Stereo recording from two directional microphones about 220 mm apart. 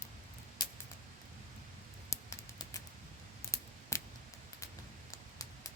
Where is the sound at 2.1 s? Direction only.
15° left (ahead or behind).